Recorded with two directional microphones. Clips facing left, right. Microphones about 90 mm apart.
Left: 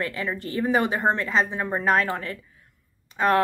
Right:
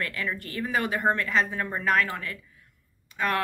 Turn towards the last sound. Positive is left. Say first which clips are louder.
# left 7 dB
turn(degrees=30)  # may be behind; listen again after turning